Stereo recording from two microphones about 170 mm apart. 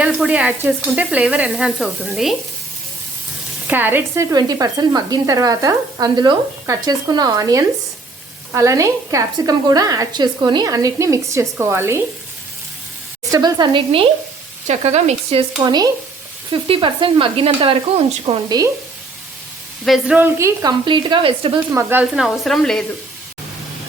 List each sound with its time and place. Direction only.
0.0 s sizzle: 5° right (ahead or behind)
3.7 s a woman's voice: 10° right (ahead or behind)
13.3 s a woman's voice: 25° right (ahead or behind)
14.7 s speech: 40° right (ahead or behind)
19.8 s a woman's voice: 5° right (ahead or behind); by 21.6 s 30° right (ahead or behind)
21.7 s a woman's voice: 15° right (ahead or behind); by 22.8 s centre (ahead or behind)